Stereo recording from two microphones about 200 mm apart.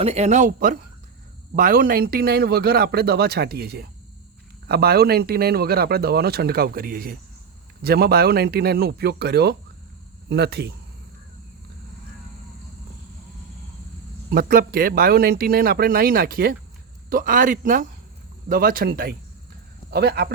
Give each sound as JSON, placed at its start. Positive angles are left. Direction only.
{"t": 0.0, "sound": "speech", "side_deg": -35}
{"t": 14.3, "sound": "speech", "side_deg": -50}